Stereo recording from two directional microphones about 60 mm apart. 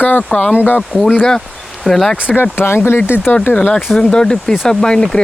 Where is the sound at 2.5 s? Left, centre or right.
Left.